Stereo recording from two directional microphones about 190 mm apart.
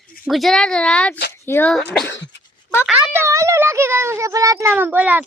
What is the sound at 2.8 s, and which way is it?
A child's voice, 10° right (ahead or behind).